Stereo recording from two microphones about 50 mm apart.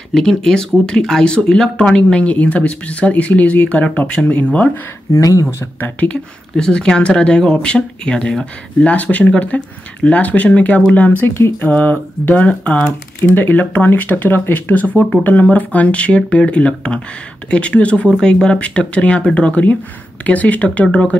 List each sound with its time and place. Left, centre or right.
0.1 s speech: centre; by 4.6 s left
5.1 s speech: left
6.0 s speech: left
6.5 s speech: centre
8.9 s speech: left
11.2 s speech: left
11.6 s speech: left
12.8 s speech: left